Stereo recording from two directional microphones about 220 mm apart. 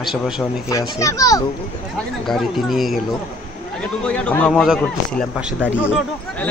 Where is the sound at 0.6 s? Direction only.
15° left (ahead or behind).